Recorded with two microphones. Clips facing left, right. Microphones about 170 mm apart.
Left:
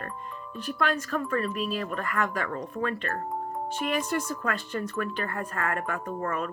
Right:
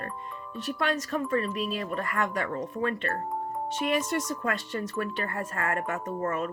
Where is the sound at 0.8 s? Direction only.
20° right (ahead or behind).